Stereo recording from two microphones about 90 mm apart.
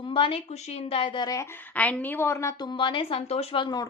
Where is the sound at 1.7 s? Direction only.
15° left (ahead or behind).